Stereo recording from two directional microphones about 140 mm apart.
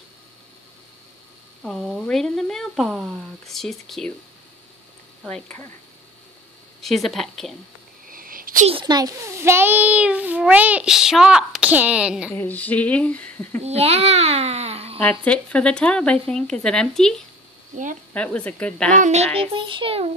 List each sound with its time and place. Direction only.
1.6 s speech: centre (ahead or behind)
5.2 s speech: 5° left (ahead or behind)
6.8 s speech: centre (ahead or behind)
8.1 s a sound: 90° right
8.8 s a child's voice: 25° right (ahead or behind); by 12.3 s 5° right (ahead or behind)
12.3 s speech: 15° left (ahead or behind)
13.7 s a child's voice: 45° right (ahead or behind)
15.0 s speech: 10° left (ahead or behind)
18.9 s a child's voice: 55° right (ahead or behind)